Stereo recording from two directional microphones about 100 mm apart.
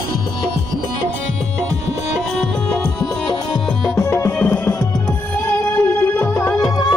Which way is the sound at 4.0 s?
25° left (ahead or behind).